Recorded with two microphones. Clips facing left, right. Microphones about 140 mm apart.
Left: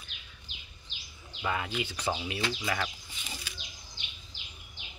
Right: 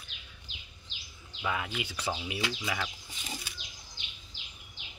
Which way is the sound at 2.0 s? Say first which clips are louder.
Left 2 dB; 5° left (ahead or behind).